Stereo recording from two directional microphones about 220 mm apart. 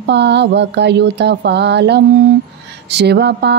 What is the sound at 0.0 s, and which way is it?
Speech, 50° right (ahead or behind).